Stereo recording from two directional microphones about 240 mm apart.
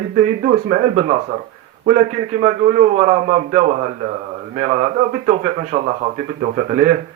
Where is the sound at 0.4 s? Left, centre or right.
Right.